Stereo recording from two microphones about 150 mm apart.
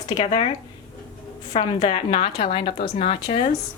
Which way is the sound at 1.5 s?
40° left (ahead or behind).